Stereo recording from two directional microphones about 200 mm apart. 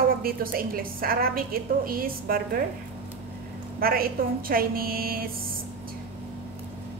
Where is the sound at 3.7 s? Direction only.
45° right (ahead or behind).